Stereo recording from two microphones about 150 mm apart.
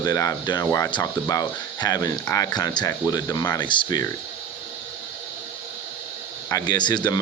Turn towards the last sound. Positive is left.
turn(degrees=30)  # may be behind; listen again after turning